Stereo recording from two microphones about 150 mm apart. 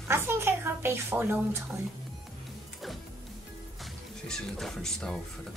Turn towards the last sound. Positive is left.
turn(degrees=5)  # may be behind; listen again after turning